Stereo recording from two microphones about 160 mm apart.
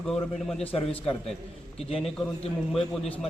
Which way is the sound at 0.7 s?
35° left (ahead or behind).